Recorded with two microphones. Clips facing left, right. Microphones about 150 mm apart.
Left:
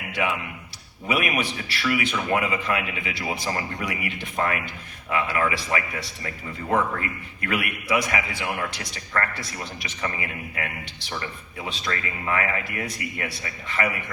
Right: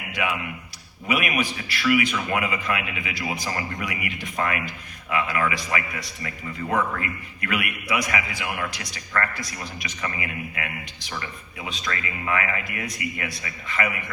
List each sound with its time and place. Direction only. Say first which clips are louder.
1.0 s a man's voice: even; 30° left (ahead or behind)